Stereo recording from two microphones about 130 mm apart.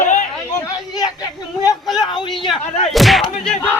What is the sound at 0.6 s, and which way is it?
Speech, 30° left (ahead or behind).